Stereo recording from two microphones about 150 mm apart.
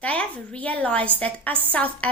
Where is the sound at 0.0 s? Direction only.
10° left (ahead or behind).